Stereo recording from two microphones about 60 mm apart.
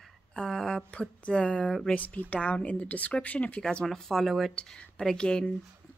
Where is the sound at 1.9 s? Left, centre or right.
Left.